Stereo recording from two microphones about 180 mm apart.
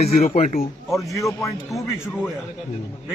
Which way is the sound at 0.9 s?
Centre (ahead or behind).